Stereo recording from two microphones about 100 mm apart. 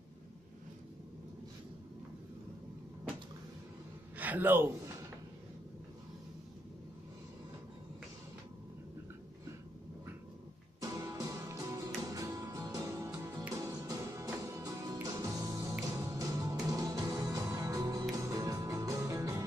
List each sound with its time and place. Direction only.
4.2 s a man's voice: 15° right (ahead or behind)
10.8 s music: 35° right (ahead or behind)